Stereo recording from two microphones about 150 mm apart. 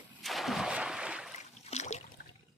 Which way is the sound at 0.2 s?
Centre (ahead or behind).